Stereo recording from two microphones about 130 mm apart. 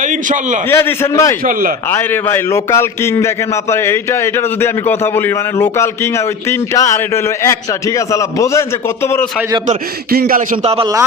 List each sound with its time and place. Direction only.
0.0 s a man's voice: 75° right (ahead or behind)
0.7 s a man's voice: 20° left (ahead or behind)
10.2 s speech: 90° right